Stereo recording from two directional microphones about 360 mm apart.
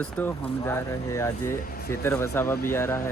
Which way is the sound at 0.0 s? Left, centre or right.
Centre.